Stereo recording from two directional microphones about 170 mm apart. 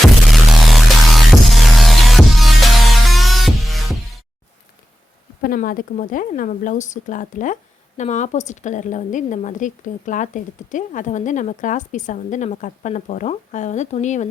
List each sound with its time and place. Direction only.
0.3 s music: centre (ahead or behind)
5.4 s speech: 60° left (ahead or behind)